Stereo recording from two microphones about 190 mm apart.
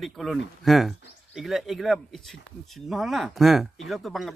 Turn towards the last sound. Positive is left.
turn(degrees=0)  # may be behind; listen again after turning